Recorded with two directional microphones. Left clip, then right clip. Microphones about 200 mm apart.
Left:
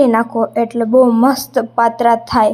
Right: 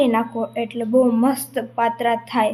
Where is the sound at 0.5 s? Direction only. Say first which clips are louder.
Left 9 dB; 90° left.